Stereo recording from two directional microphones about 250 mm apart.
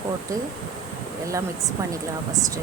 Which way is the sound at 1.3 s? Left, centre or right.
Centre.